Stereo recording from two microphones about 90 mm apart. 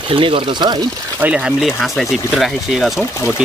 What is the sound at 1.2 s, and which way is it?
Speech, 15° right (ahead or behind).